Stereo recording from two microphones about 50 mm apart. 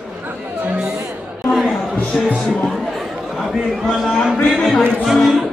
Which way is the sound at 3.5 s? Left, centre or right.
Centre.